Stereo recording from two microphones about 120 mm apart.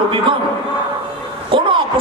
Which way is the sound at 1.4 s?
45° right (ahead or behind).